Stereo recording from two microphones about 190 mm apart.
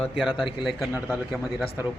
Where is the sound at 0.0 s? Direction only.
Centre (ahead or behind).